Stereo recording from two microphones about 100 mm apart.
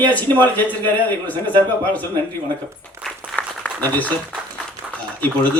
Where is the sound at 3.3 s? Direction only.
15° left (ahead or behind).